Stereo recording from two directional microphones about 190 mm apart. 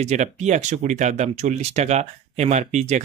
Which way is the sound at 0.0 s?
35° right (ahead or behind).